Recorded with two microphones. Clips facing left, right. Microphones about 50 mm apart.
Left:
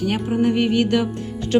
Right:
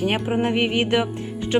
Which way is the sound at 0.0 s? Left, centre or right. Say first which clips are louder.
Left 2 dB; right.